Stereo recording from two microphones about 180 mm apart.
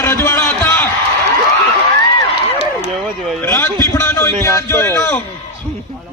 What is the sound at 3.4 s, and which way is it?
A man's voice, 15° left (ahead or behind).